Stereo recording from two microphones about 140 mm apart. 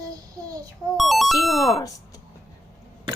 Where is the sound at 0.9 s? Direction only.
Centre (ahead or behind).